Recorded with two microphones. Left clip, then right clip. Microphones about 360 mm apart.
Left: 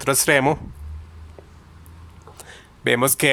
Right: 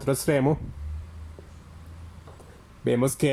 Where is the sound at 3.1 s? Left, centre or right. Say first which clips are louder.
Left 6 dB; left.